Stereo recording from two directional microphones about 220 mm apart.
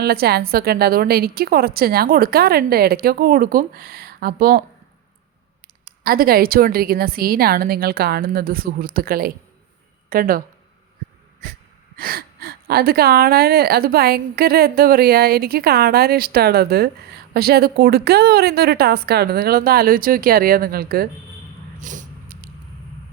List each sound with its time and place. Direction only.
0.0 s speech: 45° right (ahead or behind)
5.8 s speech: 40° right (ahead or behind)
11.9 s speech: 40° right (ahead or behind)
21.8 s a sound: 35° right (ahead or behind)